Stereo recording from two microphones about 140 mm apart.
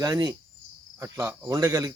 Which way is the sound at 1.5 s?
25° right (ahead or behind).